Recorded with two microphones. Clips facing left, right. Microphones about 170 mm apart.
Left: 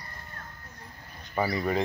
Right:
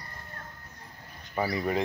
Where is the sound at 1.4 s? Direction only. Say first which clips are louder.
Left 1 dB; 5° right (ahead or behind).